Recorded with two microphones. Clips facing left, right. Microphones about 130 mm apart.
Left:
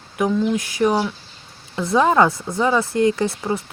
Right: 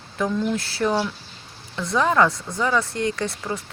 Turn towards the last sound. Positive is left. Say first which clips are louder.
# left 6 dB
turn(degrees=25)  # may be behind; listen again after turning